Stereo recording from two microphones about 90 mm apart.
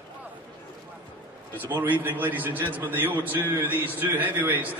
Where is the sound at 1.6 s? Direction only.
20° right (ahead or behind).